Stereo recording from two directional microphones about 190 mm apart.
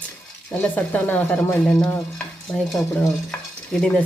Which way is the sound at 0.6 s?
10° left (ahead or behind).